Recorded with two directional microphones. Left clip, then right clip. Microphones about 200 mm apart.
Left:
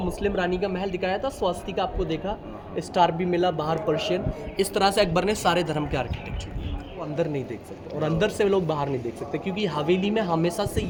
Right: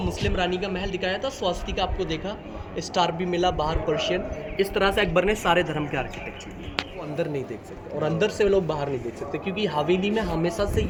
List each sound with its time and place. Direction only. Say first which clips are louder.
0.2 s a man's voice: left 1 dB; 35° left (ahead or behind); by 5.6 s 80° left
5.6 s a man's voice: left 1 dB; 65° left (ahead or behind)
8.0 s a man's voice: right 1 dB; 55° left (ahead or behind)